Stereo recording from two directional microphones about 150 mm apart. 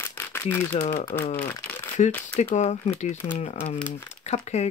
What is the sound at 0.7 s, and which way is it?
Speech, 55° left (ahead or behind).